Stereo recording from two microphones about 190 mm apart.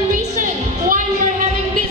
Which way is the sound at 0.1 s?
45° right (ahead or behind).